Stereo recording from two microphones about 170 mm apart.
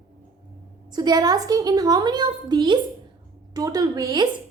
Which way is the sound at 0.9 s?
25° right (ahead or behind).